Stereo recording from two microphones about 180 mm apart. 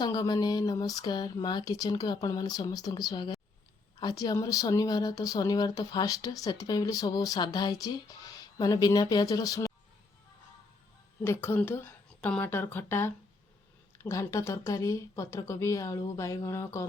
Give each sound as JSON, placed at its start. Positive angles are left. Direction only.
{"t": 0.0, "sound": "speech", "side_deg": 20}
{"t": 11.2, "sound": "speech", "side_deg": 10}